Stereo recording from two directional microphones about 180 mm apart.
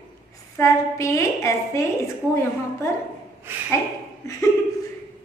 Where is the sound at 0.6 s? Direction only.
15° left (ahead or behind).